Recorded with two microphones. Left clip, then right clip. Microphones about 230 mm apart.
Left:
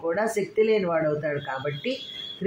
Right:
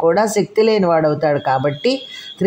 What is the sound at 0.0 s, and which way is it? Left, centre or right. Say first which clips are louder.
Speech: right 11 dB; right.